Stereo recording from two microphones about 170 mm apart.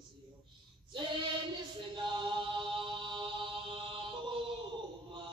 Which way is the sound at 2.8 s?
30° right (ahead or behind).